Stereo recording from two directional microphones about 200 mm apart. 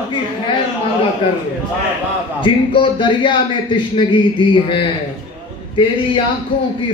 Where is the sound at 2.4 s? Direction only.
25° left (ahead or behind).